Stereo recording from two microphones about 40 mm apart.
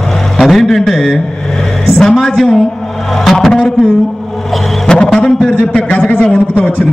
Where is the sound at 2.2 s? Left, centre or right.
Centre.